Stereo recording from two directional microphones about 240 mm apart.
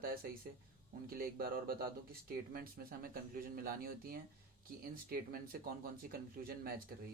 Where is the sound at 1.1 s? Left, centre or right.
Right.